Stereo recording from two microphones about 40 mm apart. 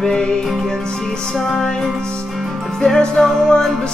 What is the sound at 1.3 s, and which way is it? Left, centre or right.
Music, centre.